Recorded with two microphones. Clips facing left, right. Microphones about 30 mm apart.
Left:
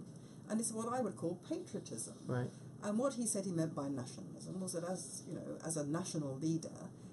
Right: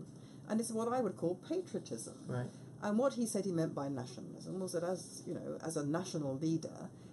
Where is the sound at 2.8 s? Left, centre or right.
Centre.